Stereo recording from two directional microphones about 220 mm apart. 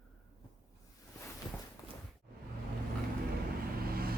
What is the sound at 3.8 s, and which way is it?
Vehicle, 45° right (ahead or behind).